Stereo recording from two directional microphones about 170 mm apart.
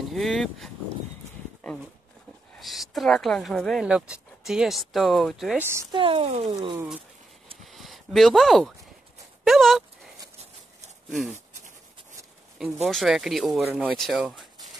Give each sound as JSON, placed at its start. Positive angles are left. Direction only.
{"t": 0.1, "sound": "speech", "side_deg": 0}
{"t": 2.6, "sound": "speech", "side_deg": 0}
{"t": 5.6, "sound": "speech", "side_deg": -15}
{"t": 5.9, "sound": "speech", "side_deg": -35}
{"t": 7.6, "sound": "a sound", "side_deg": 0}
{"t": 9.4, "sound": "speech", "side_deg": 0}
{"t": 11.3, "sound": "writing", "side_deg": -45}
{"t": 12.8, "sound": "speech", "side_deg": 0}